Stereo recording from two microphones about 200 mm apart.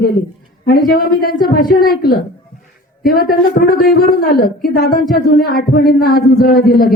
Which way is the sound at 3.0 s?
45° left (ahead or behind).